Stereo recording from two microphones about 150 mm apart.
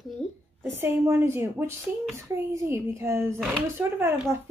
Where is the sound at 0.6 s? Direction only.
15° right (ahead or behind).